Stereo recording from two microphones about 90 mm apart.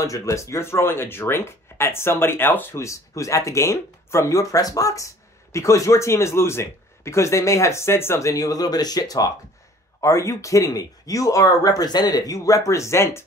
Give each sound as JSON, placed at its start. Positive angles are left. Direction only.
{"t": 0.0, "sound": "speech", "side_deg": 35}